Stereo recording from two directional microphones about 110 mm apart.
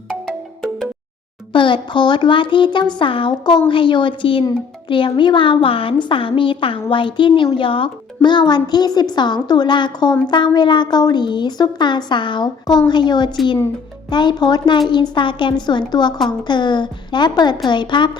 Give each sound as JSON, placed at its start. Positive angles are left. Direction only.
{"t": 0.1, "sound": "music", "side_deg": 5}
{"t": 1.5, "sound": "a woman's voice", "side_deg": 50}